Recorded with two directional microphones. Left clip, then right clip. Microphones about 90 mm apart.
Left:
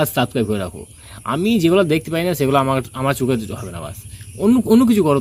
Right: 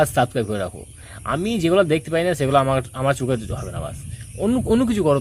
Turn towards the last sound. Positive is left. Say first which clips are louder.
# left 4 dB
turn(degrees=-30)  # may be behind; listen again after turning